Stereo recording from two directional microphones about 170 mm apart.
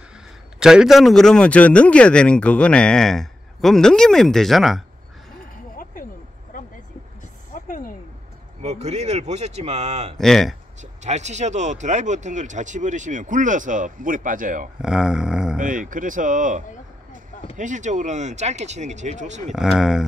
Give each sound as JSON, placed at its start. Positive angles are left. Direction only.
{"t": 0.6, "sound": "a man's voice", "side_deg": -5}
{"t": 7.5, "sound": "a sound", "side_deg": 55}
{"t": 8.6, "sound": "speech", "side_deg": -40}
{"t": 10.1, "sound": "a man's voice", "side_deg": 0}
{"t": 10.8, "sound": "speech", "side_deg": -40}
{"t": 14.8, "sound": "a man's voice", "side_deg": -5}
{"t": 15.6, "sound": "speech", "side_deg": -50}
{"t": 19.5, "sound": "a man's voice", "side_deg": -5}